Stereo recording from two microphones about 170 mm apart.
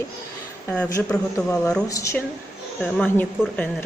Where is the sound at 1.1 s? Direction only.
10° left (ahead or behind).